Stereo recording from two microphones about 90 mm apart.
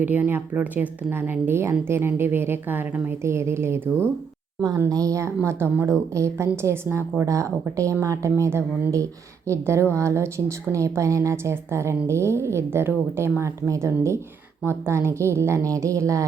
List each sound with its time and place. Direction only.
0.0 s a woman's voice: 20° right (ahead or behind)
4.9 s a woman's voice: 40° right (ahead or behind)